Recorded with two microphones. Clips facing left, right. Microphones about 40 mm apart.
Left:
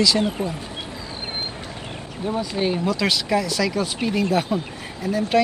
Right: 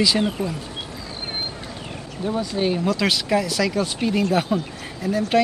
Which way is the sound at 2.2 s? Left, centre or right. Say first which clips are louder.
Right 1 dB; left.